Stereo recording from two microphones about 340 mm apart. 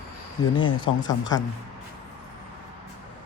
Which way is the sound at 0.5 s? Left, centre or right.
Centre.